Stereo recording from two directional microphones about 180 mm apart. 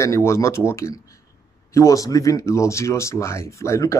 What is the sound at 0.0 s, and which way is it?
Speech, 15° left (ahead or behind).